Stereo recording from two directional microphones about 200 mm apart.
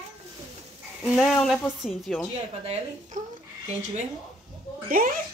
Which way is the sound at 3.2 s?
40° right (ahead or behind).